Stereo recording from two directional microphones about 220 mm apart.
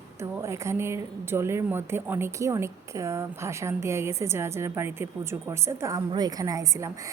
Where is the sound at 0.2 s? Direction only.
10° right (ahead or behind).